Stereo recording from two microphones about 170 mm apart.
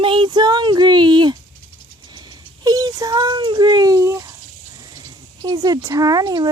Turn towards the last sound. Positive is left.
turn(degrees=-25)  # may be behind; listen again after turning